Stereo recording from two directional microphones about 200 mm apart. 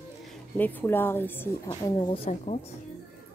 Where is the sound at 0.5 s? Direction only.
10° left (ahead or behind); by 2.6 s 30° left (ahead or behind).